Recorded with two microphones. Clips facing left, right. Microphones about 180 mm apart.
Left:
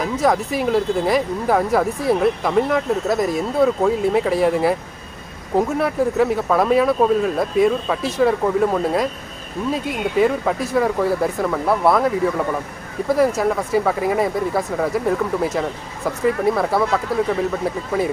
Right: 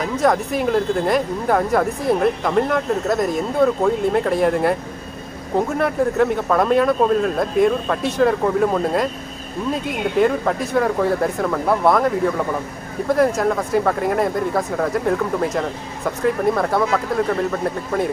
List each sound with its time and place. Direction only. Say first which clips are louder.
0.0 s speech: even; 5° left (ahead or behind)